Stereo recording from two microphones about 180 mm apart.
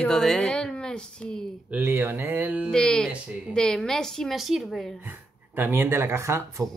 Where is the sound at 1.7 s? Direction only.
10° right (ahead or behind).